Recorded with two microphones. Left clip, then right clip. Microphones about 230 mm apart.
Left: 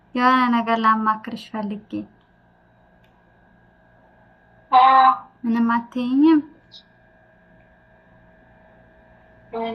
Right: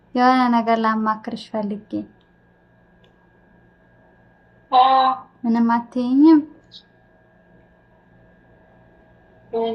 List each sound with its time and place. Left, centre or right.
0.2 s speech: centre
4.7 s speech: centre
5.9 s speech: left
9.5 s speech: centre